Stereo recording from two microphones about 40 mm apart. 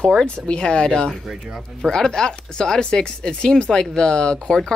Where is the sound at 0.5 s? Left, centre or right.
Left.